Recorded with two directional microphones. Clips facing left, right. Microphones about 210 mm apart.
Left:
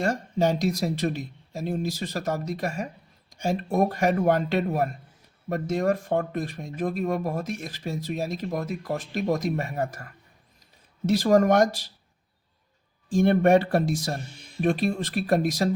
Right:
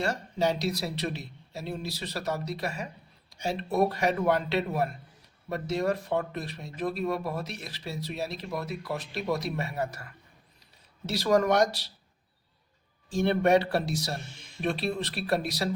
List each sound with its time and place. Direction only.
0.0 s speech: 50° left (ahead or behind)
13.1 s speech: 50° left (ahead or behind)